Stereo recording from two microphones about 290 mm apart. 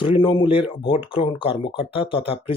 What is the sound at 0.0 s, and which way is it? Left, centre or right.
Speech, centre.